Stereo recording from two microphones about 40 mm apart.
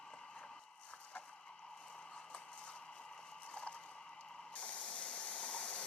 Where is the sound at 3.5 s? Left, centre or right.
Left.